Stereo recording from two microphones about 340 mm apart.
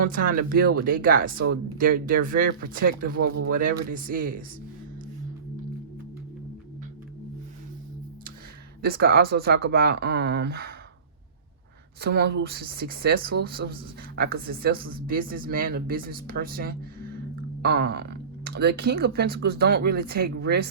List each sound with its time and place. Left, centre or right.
0.0 s speech: right
8.8 s speech: right
11.9 s speech: right